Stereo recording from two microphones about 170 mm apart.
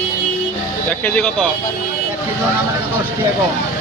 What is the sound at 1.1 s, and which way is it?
Speech, 10° left (ahead or behind).